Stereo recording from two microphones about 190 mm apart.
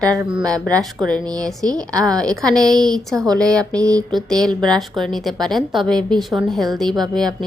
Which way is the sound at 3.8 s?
20° right (ahead or behind).